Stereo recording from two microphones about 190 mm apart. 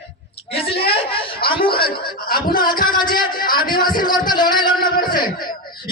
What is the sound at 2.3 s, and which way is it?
Speech, 50° left (ahead or behind).